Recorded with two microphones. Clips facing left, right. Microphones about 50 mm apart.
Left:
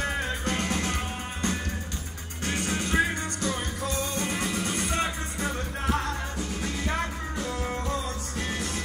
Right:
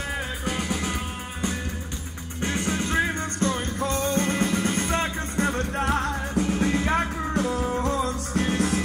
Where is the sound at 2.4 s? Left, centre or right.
Right.